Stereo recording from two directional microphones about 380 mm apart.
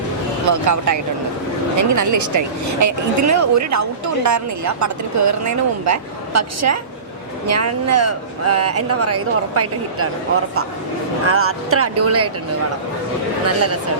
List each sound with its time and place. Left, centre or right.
0.4 s speech: right
11.3 s speech: right
13.4 s speech: right